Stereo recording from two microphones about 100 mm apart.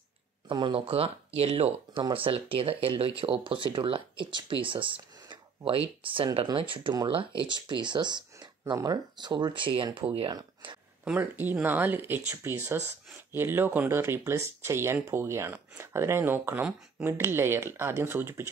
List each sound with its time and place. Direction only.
0.7 s speech: 70° right (ahead or behind); by 2.0 s 90° right
2.1 s speech: 65° right (ahead or behind)
7.5 s speech: 50° right (ahead or behind)
11.1 s speech: 20° right (ahead or behind)